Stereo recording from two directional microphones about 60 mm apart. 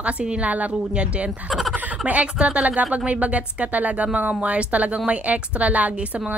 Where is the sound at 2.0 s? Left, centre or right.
Right.